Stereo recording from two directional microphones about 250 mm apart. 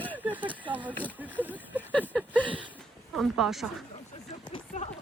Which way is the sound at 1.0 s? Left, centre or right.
Centre.